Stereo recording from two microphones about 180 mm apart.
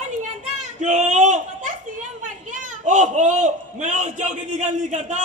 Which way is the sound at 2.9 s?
40° right (ahead or behind).